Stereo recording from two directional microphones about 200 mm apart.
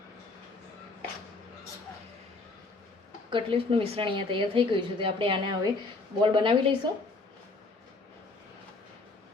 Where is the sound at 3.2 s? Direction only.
25° right (ahead or behind).